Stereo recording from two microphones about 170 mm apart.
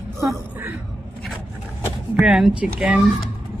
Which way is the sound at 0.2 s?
15° right (ahead or behind).